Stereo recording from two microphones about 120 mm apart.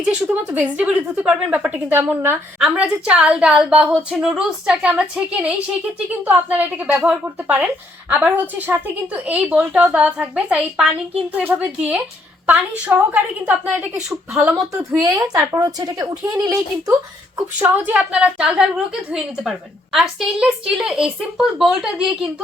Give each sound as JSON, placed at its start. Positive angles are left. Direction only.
{"t": 0.0, "sound": "a woman's voice", "side_deg": -10}
{"t": 2.6, "sound": "a woman's voice", "side_deg": -5}
{"t": 15.0, "sound": "speech", "side_deg": -30}
{"t": 17.6, "sound": "a woman's voice", "side_deg": -10}